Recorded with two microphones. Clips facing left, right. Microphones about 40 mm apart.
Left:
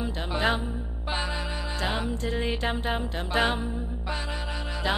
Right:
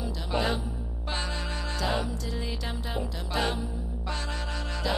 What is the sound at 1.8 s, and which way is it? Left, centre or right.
Music, left.